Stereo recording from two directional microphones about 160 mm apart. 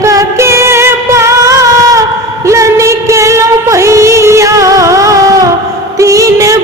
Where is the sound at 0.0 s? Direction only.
20° right (ahead or behind).